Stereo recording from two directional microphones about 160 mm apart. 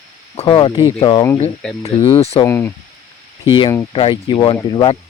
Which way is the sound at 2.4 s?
15° left (ahead or behind).